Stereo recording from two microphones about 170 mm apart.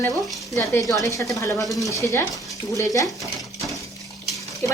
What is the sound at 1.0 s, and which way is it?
Stir, 20° left (ahead or behind).